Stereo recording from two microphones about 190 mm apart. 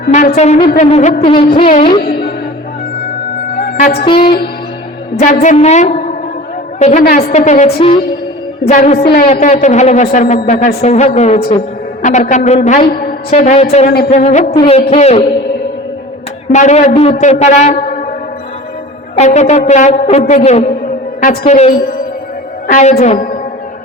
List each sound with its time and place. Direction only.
0.1 s a woman's voice: 35° left (ahead or behind)
1.2 s music: 30° left (ahead or behind)
2.0 s music: 55° left (ahead or behind)
4.0 s music: 25° left (ahead or behind)
5.2 s a woman's voice: 40° left (ahead or behind)
13.3 s a woman's voice: 35° left (ahead or behind)
14.5 s music: 25° left (ahead or behind)
14.8 s a woman's voice: 35° left (ahead or behind)
16.5 s a woman's voice: 40° left (ahead or behind)
19.1 s a woman's voice: 35° left (ahead or behind)